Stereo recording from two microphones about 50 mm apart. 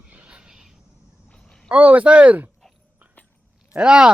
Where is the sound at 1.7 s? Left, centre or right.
Right.